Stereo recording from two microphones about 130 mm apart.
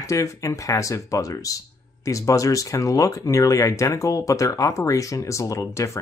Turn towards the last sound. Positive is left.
turn(degrees=25)  # may be behind; listen again after turning